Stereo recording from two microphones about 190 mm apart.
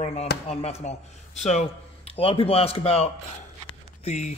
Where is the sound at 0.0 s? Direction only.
35° left (ahead or behind).